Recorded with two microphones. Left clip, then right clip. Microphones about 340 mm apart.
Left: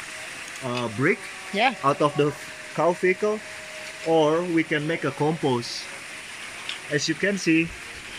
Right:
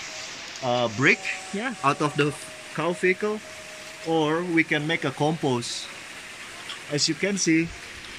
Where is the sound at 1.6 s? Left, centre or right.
Centre.